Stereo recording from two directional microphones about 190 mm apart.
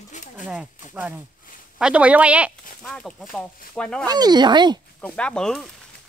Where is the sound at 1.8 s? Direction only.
5° right (ahead or behind).